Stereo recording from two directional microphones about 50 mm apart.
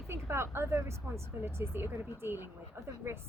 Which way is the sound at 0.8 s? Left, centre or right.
Right.